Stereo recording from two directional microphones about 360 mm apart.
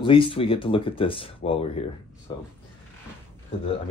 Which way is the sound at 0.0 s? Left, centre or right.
Centre.